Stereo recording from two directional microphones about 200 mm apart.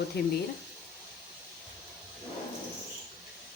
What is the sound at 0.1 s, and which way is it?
Speech, 55° left (ahead or behind).